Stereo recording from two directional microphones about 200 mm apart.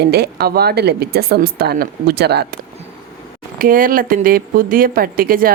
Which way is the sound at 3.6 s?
45° right (ahead or behind).